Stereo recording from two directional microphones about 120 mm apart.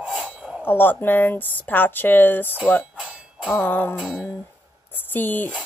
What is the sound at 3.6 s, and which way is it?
Music, 15° left (ahead or behind).